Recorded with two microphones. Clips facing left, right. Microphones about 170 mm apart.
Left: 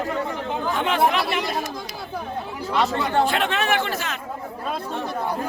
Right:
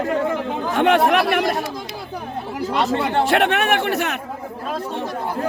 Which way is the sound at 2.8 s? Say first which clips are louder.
Right 1 dB; 65° right (ahead or behind).